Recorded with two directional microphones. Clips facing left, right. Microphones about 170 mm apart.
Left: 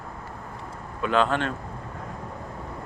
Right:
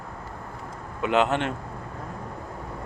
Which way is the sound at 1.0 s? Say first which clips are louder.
Right 1 dB; 20° right (ahead or behind).